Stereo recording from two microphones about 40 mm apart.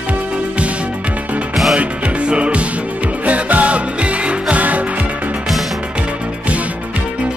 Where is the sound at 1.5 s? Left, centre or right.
Centre.